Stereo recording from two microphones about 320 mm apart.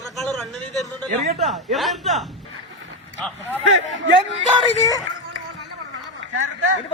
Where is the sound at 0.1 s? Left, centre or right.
Centre.